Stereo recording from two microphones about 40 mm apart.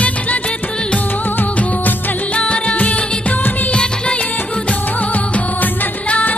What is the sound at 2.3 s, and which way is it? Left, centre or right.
Music, left.